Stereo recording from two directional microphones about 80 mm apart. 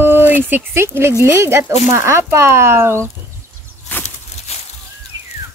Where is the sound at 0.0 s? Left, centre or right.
Right.